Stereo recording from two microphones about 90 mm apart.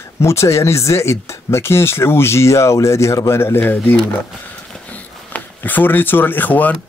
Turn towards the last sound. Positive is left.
turn(degrees=20)  # may be behind; listen again after turning